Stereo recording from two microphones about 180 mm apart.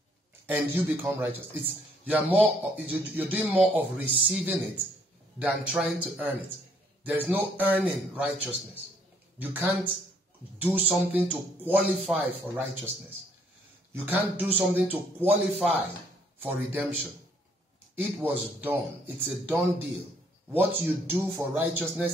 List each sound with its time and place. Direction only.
0.5 s speech: 10° right (ahead or behind)
13.9 s speech: 10° right (ahead or behind)
17.9 s speech: 10° right (ahead or behind)